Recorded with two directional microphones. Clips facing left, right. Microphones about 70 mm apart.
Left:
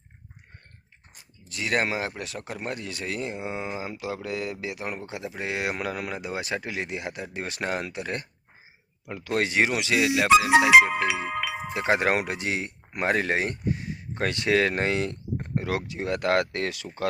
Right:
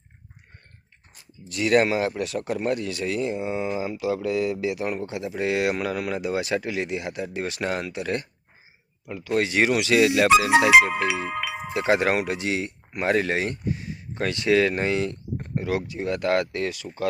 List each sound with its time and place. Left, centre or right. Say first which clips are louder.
1.5 s speech: right 6 dB; left
7.7 s speech: right 3 dB; left
9.0 s speech: right 2 dB; left
9.5 s speech: right 5 dB; centre
11.7 s speech: right 2 dB; left
15.5 s speech: right 3 dB; left
16.0 s speech: even; left